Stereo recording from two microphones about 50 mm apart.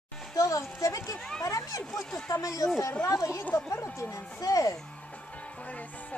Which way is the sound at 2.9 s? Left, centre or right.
Left.